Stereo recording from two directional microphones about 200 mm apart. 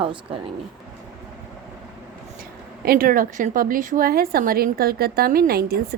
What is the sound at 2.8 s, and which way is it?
A woman's voice, 45° right (ahead or behind).